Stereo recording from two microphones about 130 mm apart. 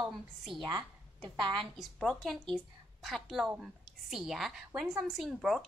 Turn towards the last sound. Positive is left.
turn(degrees=-5)  # may be behind; listen again after turning